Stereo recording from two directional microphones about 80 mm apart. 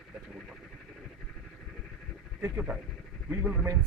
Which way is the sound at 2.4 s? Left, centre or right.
Right.